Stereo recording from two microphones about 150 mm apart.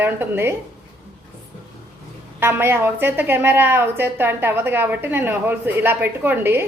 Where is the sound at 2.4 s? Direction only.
15° right (ahead or behind).